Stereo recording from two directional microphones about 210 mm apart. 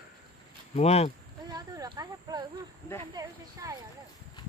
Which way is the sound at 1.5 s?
20° right (ahead or behind).